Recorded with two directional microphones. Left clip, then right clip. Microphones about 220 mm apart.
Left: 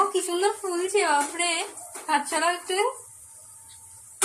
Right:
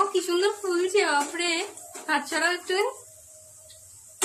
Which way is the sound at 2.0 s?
15° right (ahead or behind).